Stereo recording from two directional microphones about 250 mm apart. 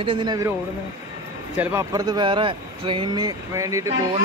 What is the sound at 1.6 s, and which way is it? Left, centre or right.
Speech, centre.